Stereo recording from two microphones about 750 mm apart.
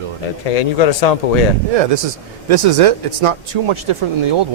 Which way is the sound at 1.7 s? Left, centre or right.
Right.